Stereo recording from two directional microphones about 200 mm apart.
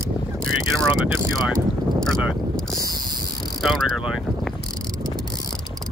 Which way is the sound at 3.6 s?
Centre (ahead or behind).